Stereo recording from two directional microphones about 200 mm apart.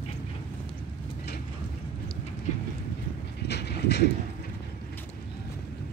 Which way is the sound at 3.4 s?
55° left (ahead or behind).